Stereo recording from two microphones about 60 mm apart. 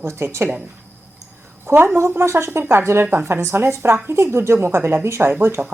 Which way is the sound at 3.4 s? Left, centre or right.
Right.